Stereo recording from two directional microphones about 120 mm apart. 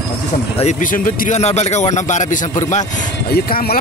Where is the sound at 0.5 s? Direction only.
80° left.